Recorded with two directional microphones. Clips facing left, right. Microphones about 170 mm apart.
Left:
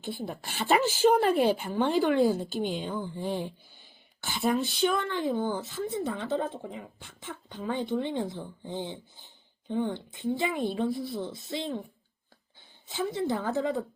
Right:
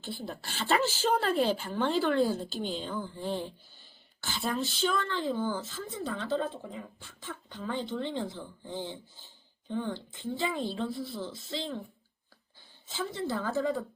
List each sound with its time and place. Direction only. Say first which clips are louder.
0.0 s speech: left 3 dB; 15° left (ahead or behind)
12.9 s a woman's voice: left 4 dB; 20° left (ahead or behind)